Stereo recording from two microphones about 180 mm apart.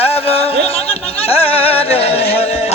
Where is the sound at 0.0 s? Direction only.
35° left (ahead or behind).